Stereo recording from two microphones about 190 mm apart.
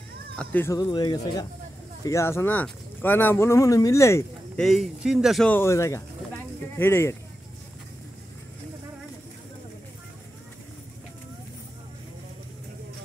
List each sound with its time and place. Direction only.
0.4 s speech: 10° left (ahead or behind)
0.7 s speech: 20° left (ahead or behind)
4.6 s speech: centre (ahead or behind)